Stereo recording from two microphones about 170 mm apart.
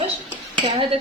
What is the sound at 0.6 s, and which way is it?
Dishes, 35° right (ahead or behind).